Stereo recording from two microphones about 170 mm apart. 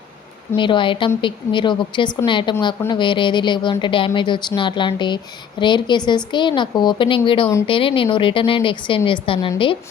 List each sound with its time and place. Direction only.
0.5 s a woman's voice: 30° left (ahead or behind)